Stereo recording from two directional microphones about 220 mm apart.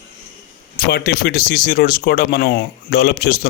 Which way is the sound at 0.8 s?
45° left (ahead or behind).